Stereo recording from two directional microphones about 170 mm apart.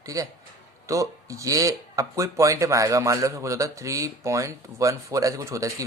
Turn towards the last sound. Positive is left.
turn(degrees=-20)  # may be behind; listen again after turning